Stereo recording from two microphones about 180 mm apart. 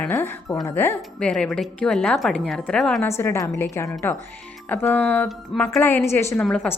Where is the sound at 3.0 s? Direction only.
15° left (ahead or behind).